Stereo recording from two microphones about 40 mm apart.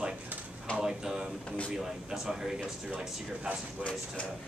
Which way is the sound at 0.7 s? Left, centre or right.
Centre.